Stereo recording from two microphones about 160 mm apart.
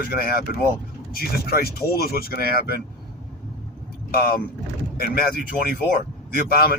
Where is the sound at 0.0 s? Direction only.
70° left (ahead or behind).